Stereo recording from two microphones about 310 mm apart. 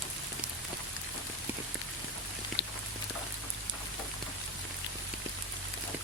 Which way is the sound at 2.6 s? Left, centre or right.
Left.